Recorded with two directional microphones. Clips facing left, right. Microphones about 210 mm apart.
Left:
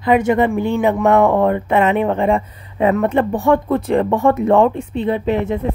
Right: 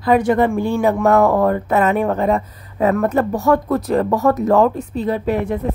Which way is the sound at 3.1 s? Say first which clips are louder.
Left 1 dB; 30° left (ahead or behind).